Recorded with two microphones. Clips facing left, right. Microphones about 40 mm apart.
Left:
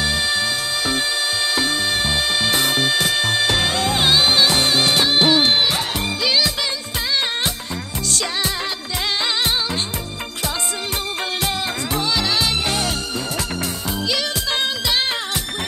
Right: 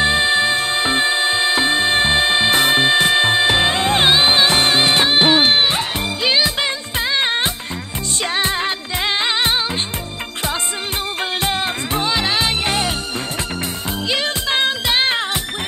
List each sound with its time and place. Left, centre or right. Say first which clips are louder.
0.0 s music: right 5 dB; right
8.2 s music: right 6 dB; right
11.4 s music: right 3 dB; right
14.0 s music: right 3 dB; right